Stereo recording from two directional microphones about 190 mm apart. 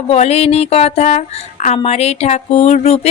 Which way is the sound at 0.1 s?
35° left (ahead or behind).